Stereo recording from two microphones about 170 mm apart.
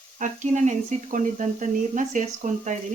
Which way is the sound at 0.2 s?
45° right (ahead or behind).